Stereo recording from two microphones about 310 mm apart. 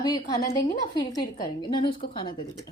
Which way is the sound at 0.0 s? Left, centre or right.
Centre.